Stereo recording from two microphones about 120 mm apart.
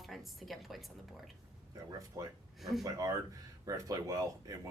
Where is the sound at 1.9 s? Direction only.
30° right (ahead or behind).